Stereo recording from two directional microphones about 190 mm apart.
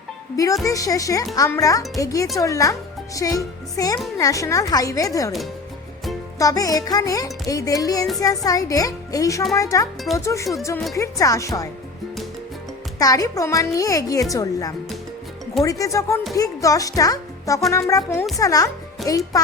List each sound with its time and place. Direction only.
0.6 s speech: 15° left (ahead or behind)
6.4 s music: 20° left (ahead or behind)
8.4 s speech: 20° left (ahead or behind)
13.0 s speech: 20° left (ahead or behind)
14.3 s music: 20° left (ahead or behind)
15.6 s speech: 15° left (ahead or behind)
18.3 s music: 20° left (ahead or behind)